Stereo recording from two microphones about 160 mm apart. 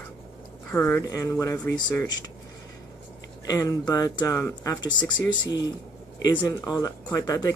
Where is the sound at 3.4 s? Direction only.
20° left (ahead or behind).